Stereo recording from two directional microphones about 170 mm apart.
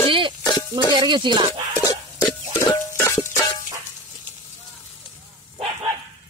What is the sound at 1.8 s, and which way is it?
Music, 20° left (ahead or behind).